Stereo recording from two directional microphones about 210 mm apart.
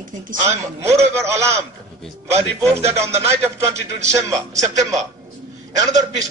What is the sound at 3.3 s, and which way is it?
A man's voice, 15° right (ahead or behind).